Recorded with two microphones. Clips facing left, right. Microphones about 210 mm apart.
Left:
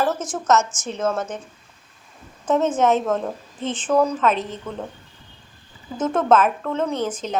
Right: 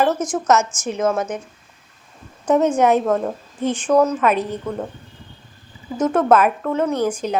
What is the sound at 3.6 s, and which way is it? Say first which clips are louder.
A woman's voice: right 3 dB; 10° right (ahead or behind).